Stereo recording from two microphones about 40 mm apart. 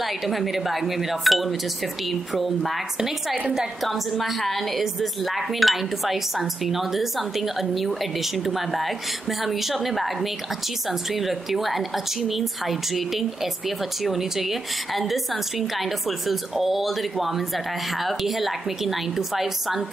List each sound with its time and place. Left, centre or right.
0.0 s a woman's voice: centre
3.8 s a woman's voice: centre